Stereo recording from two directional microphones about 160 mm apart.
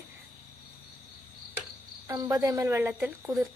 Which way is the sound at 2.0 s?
20° right (ahead or behind).